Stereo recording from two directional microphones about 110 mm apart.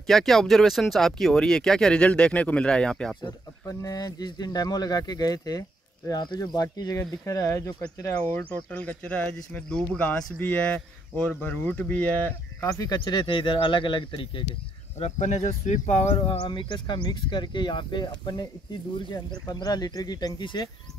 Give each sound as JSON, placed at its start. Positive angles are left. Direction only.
{"t": 0.0, "sound": "speech", "side_deg": 5}
{"t": 3.2, "sound": "speech", "side_deg": 40}
{"t": 8.3, "sound": "speech", "side_deg": 15}
{"t": 12.6, "sound": "speech", "side_deg": 30}
{"t": 15.0, "sound": "speech", "side_deg": 90}
{"t": 16.2, "sound": "speech", "side_deg": 50}